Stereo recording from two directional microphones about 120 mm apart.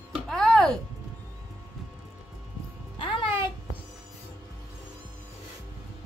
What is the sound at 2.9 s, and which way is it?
Music, 45° left (ahead or behind).